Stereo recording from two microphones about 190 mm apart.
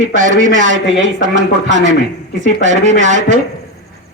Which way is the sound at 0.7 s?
80° right.